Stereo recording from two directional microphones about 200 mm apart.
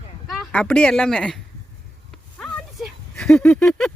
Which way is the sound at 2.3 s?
Centre (ahead or behind).